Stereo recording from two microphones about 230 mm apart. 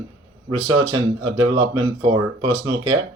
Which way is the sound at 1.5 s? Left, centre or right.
Centre.